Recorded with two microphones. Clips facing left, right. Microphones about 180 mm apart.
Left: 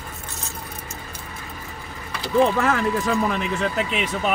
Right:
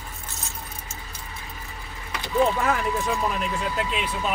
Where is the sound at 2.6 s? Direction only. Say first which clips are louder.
Left 3 dB; 80° left.